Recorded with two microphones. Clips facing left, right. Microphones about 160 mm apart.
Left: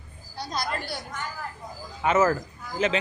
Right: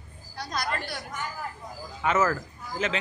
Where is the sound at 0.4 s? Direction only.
30° left (ahead or behind).